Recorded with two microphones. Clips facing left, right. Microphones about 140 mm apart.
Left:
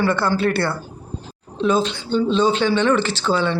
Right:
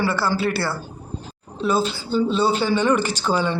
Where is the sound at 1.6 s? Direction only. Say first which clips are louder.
Left 2 dB; 5° right (ahead or behind).